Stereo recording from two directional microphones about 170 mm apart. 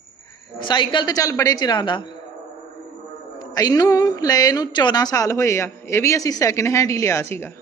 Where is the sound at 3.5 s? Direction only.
20° left (ahead or behind).